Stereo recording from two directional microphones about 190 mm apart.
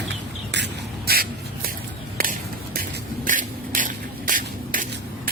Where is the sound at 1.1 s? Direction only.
55° right (ahead or behind).